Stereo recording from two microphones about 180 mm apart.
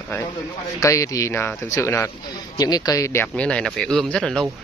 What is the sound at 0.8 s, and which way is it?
Speech, 20° left (ahead or behind).